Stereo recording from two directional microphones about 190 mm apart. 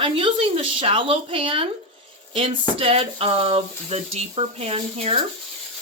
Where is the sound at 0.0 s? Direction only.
25° right (ahead or behind).